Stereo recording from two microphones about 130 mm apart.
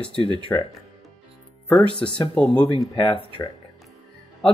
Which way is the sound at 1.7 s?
5° left (ahead or behind).